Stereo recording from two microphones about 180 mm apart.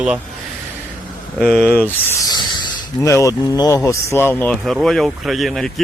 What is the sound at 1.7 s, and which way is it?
Speech, 10° left (ahead or behind).